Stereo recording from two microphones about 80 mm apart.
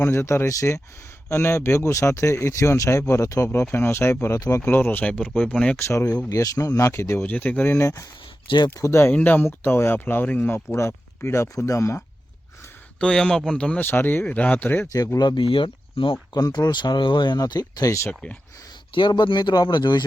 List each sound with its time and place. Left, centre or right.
0.0 s speech: left
4.7 s speech: left
6.3 s speech: left
7.3 s speech: left
7.8 s speech: left
8.4 s speech: left
8.7 s speech: left
9.1 s speech: left
13.0 s speech: centre
13.7 s speech: left
14.9 s speech: left
16.3 s speech: left
18.1 s speech: centre
18.9 s speech: left